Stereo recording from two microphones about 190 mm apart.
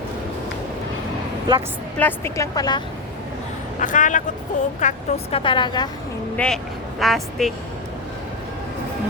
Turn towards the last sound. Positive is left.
turn(degrees=0)  # may be behind; listen again after turning